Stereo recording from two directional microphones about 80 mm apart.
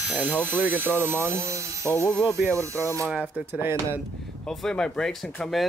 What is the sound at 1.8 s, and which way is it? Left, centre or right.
Speech, left.